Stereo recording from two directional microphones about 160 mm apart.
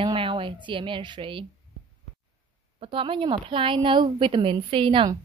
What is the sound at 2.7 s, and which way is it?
Speech, 35° right (ahead or behind).